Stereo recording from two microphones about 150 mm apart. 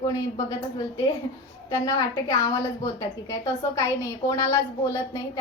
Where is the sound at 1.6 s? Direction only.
25° left (ahead or behind).